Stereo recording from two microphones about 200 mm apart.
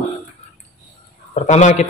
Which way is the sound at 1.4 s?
35° left (ahead or behind).